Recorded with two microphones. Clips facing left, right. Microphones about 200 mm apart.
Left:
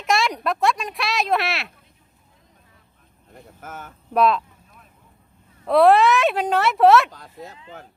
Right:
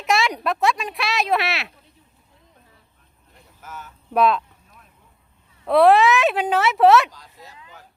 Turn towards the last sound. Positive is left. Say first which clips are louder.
# even
turn(degrees=0)  # may be behind; listen again after turning